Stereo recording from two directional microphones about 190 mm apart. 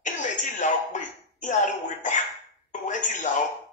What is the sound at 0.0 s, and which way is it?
Speech, 40° left (ahead or behind).